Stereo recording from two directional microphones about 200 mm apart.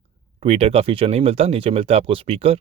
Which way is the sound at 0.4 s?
30° right (ahead or behind).